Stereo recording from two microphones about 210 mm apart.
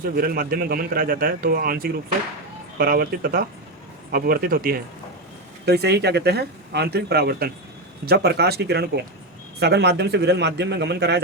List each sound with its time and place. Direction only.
0.2 s speech: 45° right (ahead or behind)